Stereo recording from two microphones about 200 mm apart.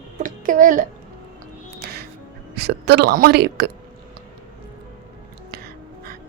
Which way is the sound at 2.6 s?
55° right (ahead or behind).